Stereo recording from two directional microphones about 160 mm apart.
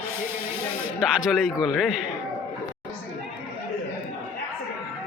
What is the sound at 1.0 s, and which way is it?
Speech, 5° right (ahead or behind).